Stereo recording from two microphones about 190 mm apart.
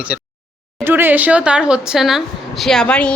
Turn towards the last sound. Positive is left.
turn(degrees=5)  # may be behind; listen again after turning